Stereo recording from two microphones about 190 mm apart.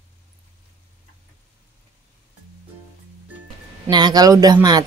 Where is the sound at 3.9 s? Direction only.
20° right (ahead or behind).